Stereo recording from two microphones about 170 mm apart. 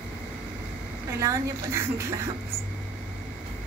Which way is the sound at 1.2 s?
20° right (ahead or behind).